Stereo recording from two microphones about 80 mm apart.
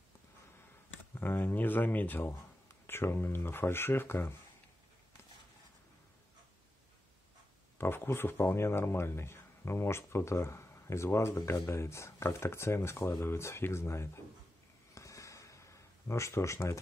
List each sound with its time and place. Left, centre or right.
1.1 s speech: left
7.7 s speech: left
15.0 s a sound: left